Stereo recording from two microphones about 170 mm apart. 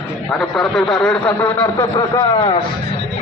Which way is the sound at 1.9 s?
30° left (ahead or behind).